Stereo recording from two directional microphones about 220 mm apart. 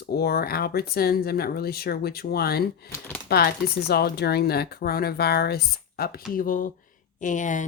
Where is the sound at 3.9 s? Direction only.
45° left (ahead or behind).